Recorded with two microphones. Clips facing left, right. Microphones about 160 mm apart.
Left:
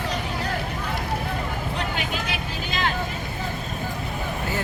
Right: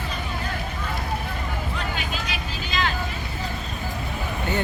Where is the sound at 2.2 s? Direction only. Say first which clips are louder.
Left 2 dB; 55° left (ahead or behind).